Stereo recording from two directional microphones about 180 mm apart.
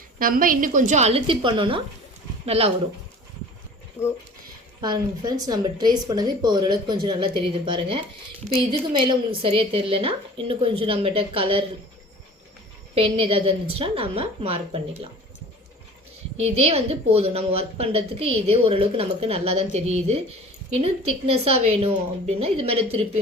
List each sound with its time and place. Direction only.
0.2 s a woman's voice: 50° right (ahead or behind); by 2.7 s 35° right (ahead or behind)
4.0 s speech: 10° left (ahead or behind)
4.8 s a woman's voice: 20° right (ahead or behind)
12.9 s a woman's voice: 30° right (ahead or behind)
16.4 s a woman's voice: 35° right (ahead or behind)